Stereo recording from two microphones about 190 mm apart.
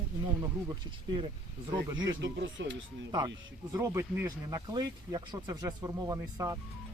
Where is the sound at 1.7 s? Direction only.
25° right (ahead or behind).